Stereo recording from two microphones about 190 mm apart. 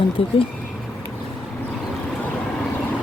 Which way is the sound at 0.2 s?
30° left (ahead or behind).